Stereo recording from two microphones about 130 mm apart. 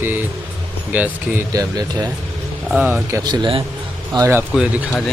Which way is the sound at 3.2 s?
35° right (ahead or behind).